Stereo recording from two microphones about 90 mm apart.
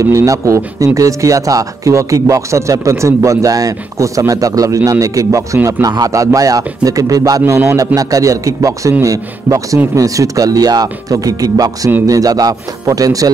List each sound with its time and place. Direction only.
0.1 s speech: 35° right (ahead or behind)